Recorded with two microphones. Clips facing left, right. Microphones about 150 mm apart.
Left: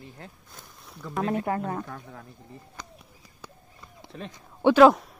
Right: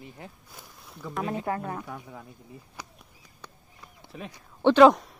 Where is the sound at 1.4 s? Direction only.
20° left (ahead or behind).